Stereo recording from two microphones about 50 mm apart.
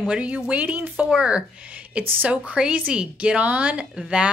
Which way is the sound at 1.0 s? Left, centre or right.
Centre.